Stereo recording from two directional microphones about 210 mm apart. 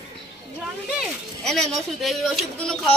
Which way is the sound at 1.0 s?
Centre (ahead or behind).